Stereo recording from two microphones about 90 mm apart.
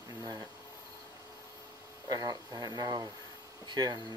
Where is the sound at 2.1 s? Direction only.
50° right (ahead or behind).